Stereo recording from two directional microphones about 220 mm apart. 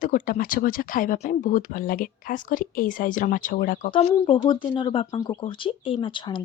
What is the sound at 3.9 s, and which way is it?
Speech, 25° left (ahead or behind).